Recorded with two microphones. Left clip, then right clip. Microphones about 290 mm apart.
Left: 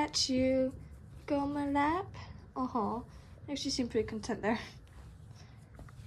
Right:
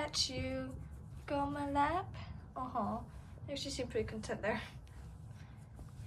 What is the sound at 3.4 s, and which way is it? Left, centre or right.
A woman's voice, centre.